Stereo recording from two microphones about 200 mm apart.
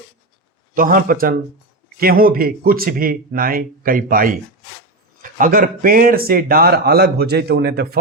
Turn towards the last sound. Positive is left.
turn(degrees=-50)  # may be behind; listen again after turning